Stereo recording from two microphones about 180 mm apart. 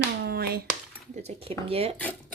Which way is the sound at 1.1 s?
35° right (ahead or behind).